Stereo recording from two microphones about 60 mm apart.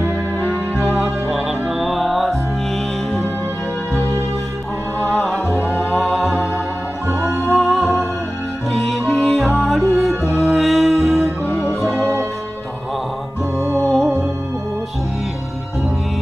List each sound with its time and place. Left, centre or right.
0.9 s music: centre
5.0 s music: centre
11.9 s music: right
13.6 s music: right
13.8 s music: centre